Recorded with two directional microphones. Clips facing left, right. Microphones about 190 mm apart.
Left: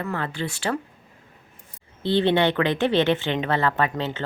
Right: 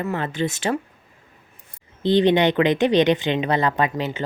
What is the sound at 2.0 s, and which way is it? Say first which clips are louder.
Speech: right 3 dB; 15° right (ahead or behind).